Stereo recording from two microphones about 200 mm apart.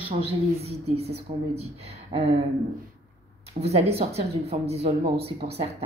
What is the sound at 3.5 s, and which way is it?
A woman's voice, 30° right (ahead or behind).